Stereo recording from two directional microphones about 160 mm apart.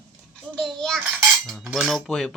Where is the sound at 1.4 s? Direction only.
Centre (ahead or behind).